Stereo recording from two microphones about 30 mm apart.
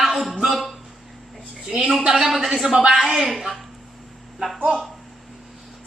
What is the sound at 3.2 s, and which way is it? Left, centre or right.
Speech, centre.